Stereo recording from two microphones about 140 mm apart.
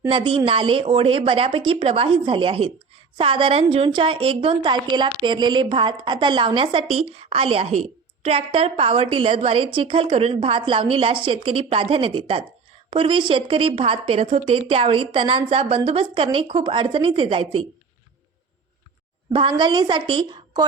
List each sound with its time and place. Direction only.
0.1 s a woman's voice: 35° right (ahead or behind)
19.3 s a woman's voice: 40° right (ahead or behind)